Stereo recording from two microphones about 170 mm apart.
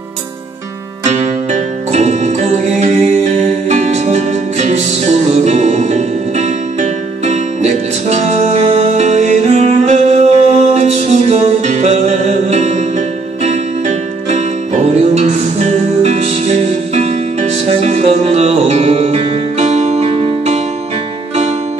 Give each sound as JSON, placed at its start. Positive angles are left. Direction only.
{"t": 1.0, "sound": "music", "side_deg": -40}